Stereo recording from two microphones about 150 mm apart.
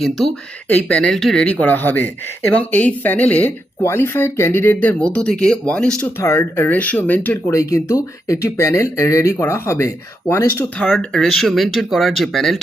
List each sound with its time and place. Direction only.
0.7 s speech: 10° left (ahead or behind)
10.8 s speech: 5° left (ahead or behind)